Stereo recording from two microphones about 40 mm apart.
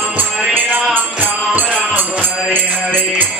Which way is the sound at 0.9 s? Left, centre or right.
Right.